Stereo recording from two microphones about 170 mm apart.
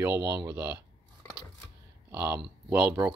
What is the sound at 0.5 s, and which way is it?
Speech, 10° right (ahead or behind).